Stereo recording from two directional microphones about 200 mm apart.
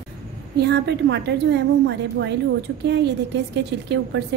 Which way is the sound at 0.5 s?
55° right (ahead or behind).